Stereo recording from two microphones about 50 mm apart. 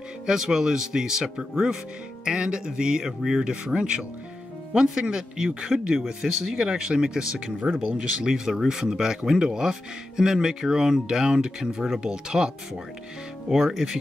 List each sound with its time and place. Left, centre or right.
0.3 s speech: centre
13.5 s speech: centre